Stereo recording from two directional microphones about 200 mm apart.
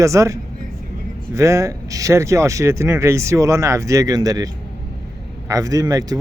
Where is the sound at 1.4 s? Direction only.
15° right (ahead or behind).